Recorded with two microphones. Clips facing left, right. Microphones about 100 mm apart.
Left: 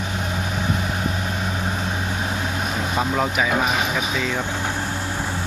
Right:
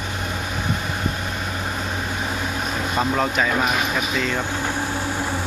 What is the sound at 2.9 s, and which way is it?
Speech, 5° left (ahead or behind).